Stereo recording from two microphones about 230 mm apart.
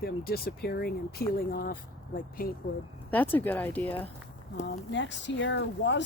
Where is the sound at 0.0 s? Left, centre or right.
Left.